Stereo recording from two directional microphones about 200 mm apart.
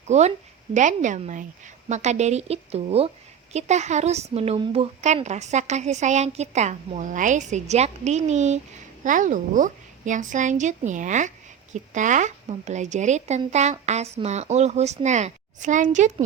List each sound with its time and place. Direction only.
0.1 s a woman's voice: 35° right (ahead or behind)